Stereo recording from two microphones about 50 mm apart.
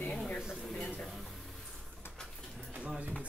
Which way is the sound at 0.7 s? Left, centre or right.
Centre.